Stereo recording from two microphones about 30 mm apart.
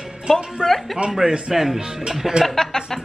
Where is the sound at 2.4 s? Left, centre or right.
Centre.